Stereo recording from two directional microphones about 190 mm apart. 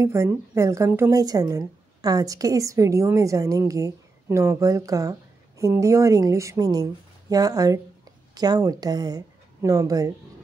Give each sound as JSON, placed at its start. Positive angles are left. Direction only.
{"t": 0.0, "sound": "speech", "side_deg": -15}